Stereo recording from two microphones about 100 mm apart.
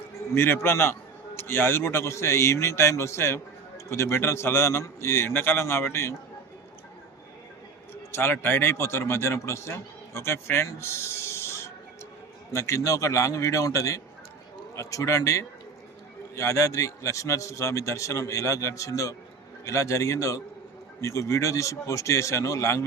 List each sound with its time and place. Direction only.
0.3 s a man's voice: 25° left (ahead or behind)
8.1 s a man's voice: 20° left (ahead or behind)